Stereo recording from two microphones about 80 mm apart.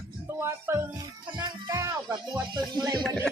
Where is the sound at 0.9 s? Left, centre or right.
Right.